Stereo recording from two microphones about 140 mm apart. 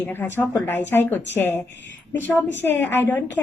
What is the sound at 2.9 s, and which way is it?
Speech, 15° left (ahead or behind).